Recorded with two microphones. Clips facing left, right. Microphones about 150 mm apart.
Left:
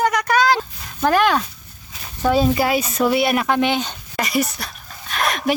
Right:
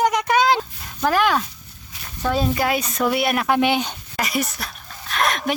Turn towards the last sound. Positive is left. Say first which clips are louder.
# left 1 dB
turn(degrees=0)  # may be behind; listen again after turning